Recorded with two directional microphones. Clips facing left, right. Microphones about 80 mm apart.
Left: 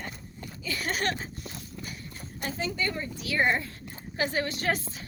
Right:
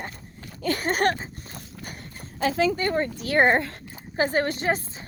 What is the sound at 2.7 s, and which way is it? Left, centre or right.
Speech, right.